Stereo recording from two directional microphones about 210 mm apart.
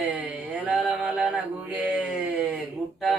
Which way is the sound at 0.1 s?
5° right (ahead or behind).